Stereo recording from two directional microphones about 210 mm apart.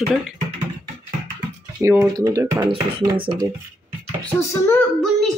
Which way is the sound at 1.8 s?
10° right (ahead or behind).